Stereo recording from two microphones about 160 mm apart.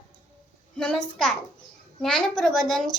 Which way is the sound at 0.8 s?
5° left (ahead or behind).